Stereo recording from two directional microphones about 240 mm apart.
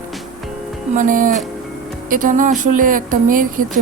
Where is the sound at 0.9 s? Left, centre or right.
Right.